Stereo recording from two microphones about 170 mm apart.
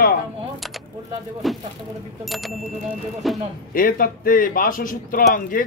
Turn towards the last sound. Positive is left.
turn(degrees=55)  # may be behind; listen again after turning